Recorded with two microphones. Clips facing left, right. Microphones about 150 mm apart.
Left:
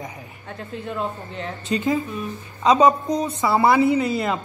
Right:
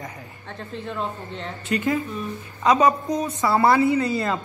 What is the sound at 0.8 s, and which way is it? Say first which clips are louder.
Speech: left 2 dB; 5° left (ahead or behind).